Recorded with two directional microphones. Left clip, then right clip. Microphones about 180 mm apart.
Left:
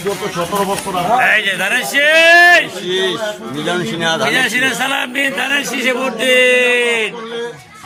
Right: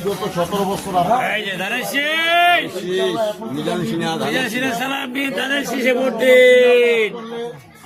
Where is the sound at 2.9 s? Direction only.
35° left (ahead or behind).